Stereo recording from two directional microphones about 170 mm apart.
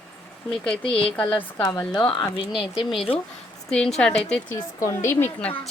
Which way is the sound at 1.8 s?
25° left (ahead or behind).